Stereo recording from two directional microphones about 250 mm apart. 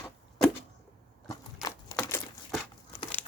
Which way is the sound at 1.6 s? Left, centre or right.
Centre.